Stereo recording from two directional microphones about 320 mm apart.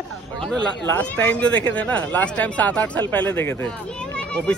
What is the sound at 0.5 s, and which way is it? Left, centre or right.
Speech, centre.